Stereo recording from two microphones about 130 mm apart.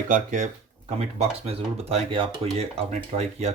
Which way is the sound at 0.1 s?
75° right (ahead or behind).